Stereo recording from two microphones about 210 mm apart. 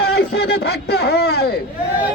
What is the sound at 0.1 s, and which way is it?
A man's voice, 50° left (ahead or behind).